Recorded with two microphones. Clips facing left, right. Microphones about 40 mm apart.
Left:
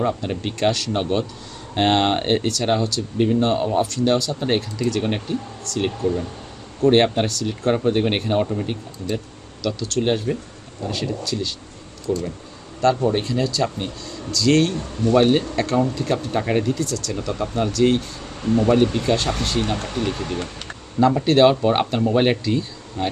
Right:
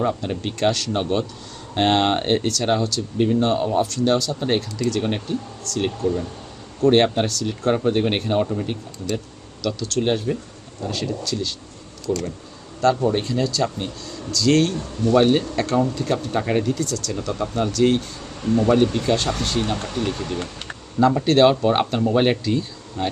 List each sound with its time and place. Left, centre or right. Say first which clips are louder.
0.0 s speech: even; centre
18.4 s speech: left 1 dB; centre
18.7 s speech: even; centre
19.7 s speech: left 1 dB; centre